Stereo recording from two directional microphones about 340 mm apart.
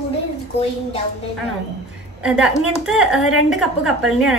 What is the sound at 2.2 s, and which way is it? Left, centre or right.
A woman's voice, centre.